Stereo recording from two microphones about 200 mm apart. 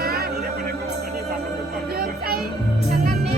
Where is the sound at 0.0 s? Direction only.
50° right (ahead or behind).